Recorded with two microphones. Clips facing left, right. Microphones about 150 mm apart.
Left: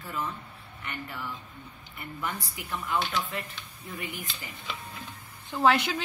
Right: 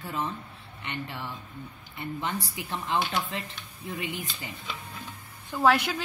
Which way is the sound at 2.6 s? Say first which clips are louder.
Right 1 dB; 30° right (ahead or behind).